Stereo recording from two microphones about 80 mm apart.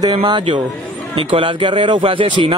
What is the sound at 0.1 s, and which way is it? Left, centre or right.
A man's voice, right.